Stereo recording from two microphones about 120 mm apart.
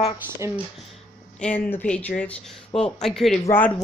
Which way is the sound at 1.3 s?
10° left (ahead or behind).